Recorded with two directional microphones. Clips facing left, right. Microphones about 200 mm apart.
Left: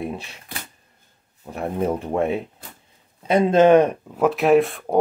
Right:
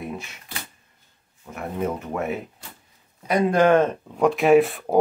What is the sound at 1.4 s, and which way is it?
Speech, 30° left (ahead or behind).